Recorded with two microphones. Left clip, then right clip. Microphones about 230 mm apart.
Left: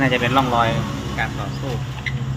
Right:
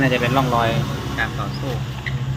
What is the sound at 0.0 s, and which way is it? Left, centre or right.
Speech, centre.